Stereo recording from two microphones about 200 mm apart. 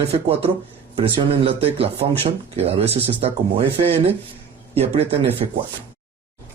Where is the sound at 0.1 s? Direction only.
30° right (ahead or behind).